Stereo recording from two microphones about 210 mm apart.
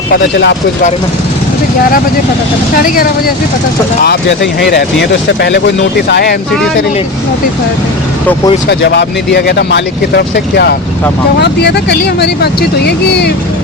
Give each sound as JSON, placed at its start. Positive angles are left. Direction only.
{"t": 0.1, "sound": "speech", "side_deg": 55}
{"t": 2.7, "sound": "speech", "side_deg": 40}
{"t": 8.6, "sound": "speech", "side_deg": 55}